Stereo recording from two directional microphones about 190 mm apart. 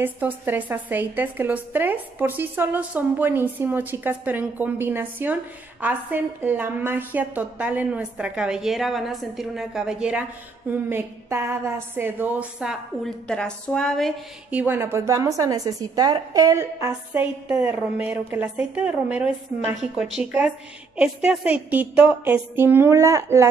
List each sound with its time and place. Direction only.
0.0 s a woman's voice: 10° right (ahead or behind)